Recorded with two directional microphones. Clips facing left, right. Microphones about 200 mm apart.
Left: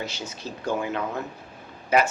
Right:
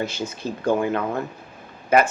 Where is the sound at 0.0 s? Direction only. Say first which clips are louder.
Right 7 dB; 55° right (ahead or behind).